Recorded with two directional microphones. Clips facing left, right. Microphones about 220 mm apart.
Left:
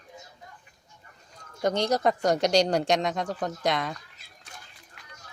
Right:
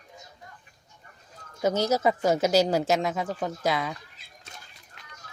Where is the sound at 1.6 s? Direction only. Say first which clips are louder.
Right 1 dB; 5° right (ahead or behind).